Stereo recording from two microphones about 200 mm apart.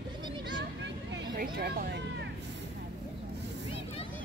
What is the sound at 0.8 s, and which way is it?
Vehicle, 55° right (ahead or behind).